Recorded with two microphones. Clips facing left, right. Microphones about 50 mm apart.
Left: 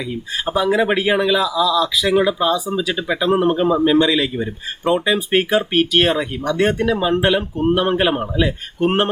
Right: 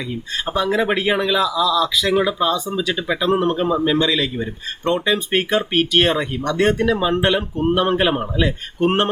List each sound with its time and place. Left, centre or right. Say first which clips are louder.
0.0 s speech: left 2 dB; centre